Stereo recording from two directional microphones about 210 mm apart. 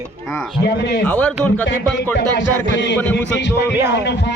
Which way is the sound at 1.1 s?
5° left (ahead or behind).